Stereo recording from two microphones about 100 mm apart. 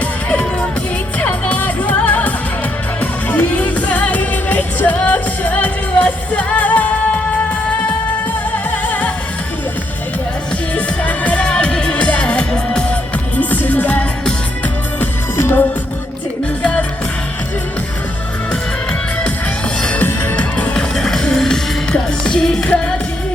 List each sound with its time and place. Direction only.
0.0 s music: 15° left (ahead or behind)
10.8 s music: 15° left (ahead or behind)
19.8 s music: 15° left (ahead or behind)